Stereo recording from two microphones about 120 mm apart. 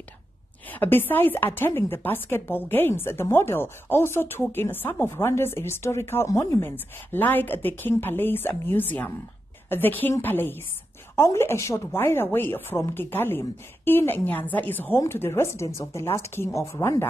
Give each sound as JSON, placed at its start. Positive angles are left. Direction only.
{"t": 0.7, "sound": "a woman's voice", "side_deg": 15}